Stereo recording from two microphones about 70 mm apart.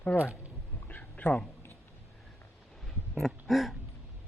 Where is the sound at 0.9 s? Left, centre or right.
Left.